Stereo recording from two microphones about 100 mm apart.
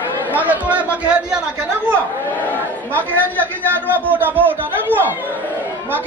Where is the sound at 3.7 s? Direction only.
20° right (ahead or behind).